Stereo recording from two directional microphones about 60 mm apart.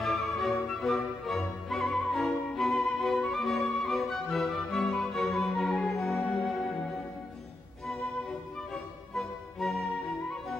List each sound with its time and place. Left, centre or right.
0.0 s music: centre
8.7 s music: centre